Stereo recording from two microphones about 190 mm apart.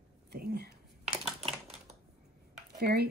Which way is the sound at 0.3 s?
55° right (ahead or behind).